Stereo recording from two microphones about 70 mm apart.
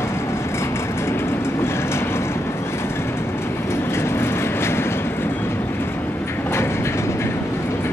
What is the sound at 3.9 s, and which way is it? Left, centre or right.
Vehicle, left.